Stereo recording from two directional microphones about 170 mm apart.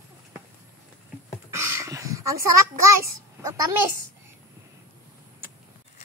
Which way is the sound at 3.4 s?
20° right (ahead or behind).